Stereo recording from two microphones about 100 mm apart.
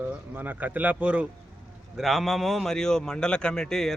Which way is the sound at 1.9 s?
Centre (ahead or behind).